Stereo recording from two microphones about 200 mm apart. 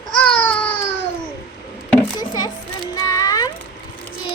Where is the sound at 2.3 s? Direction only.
20° left (ahead or behind).